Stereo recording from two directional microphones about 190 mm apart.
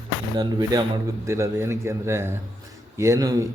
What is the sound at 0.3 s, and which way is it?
Speech, 20° right (ahead or behind).